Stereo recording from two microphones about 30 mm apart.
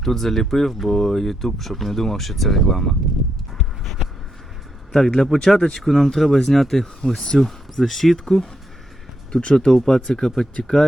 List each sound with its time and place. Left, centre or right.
0.0 s speech: centre
4.9 s speech: centre
5.5 s speech: left
5.8 s speech: centre
9.3 s speech: left